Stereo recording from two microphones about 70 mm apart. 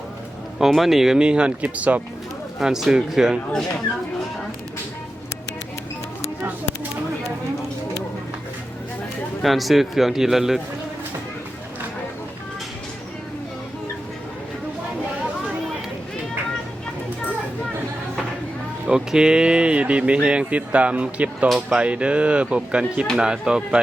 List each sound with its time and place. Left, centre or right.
0.6 s speech: centre; by 2.0 s right
2.6 s speech: centre
9.4 s a man's voice: centre
18.9 s speech: centre